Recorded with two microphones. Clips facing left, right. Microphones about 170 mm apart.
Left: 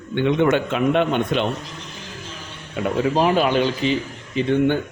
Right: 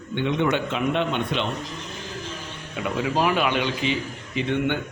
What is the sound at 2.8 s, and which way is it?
A man's voice, 35° left (ahead or behind).